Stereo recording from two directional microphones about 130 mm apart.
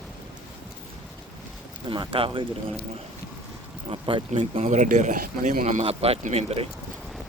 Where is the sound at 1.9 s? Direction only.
40° right (ahead or behind).